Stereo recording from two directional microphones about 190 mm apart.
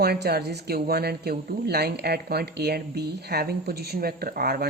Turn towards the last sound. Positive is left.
turn(degrees=-55)  # may be behind; listen again after turning